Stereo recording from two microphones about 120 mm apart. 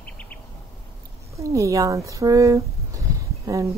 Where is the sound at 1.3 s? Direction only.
25° right (ahead or behind).